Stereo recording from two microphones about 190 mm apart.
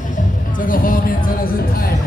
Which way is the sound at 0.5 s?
45° left (ahead or behind).